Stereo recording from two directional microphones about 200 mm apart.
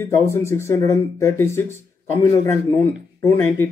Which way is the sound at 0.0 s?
15° left (ahead or behind).